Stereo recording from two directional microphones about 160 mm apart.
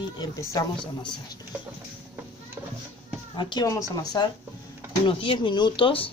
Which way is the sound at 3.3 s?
25° left (ahead or behind).